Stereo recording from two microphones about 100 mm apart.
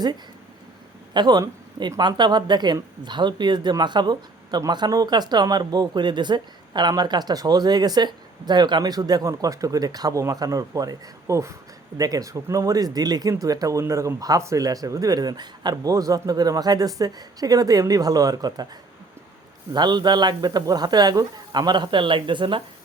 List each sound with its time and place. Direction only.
1.1 s speech: 45° right (ahead or behind)
19.7 s speech: 45° right (ahead or behind)